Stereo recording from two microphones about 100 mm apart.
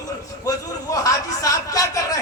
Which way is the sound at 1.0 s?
35° left (ahead or behind).